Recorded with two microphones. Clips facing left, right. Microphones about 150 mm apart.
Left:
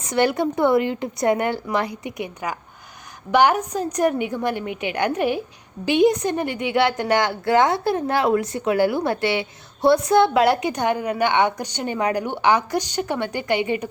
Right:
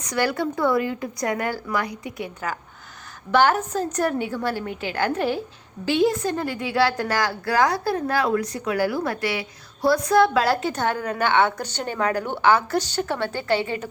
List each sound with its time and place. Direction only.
0.0 s a woman's voice: 25° left (ahead or behind)